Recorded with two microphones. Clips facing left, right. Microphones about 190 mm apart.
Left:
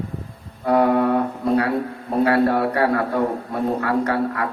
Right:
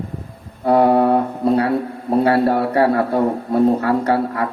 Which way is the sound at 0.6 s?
30° right (ahead or behind).